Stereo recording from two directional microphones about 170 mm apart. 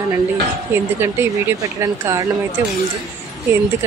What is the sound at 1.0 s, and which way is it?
A woman's voice, 15° right (ahead or behind).